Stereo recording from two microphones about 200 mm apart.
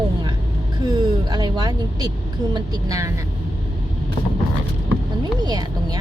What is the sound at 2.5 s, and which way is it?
Speech, 15° right (ahead or behind).